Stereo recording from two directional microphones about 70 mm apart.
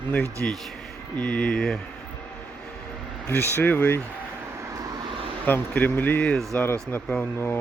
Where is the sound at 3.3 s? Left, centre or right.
Left.